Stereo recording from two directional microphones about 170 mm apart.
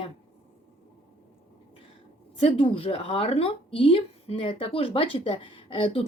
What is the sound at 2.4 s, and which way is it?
Speech, 35° left (ahead or behind).